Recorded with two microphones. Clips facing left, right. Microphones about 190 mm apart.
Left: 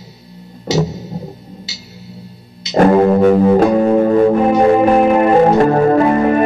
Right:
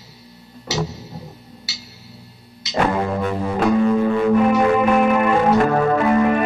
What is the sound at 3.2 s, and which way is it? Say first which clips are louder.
Music: left 13 dB; 70° left (ahead or behind).